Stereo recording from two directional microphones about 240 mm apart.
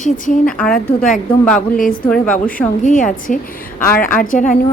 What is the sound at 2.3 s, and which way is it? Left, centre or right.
Speech, left.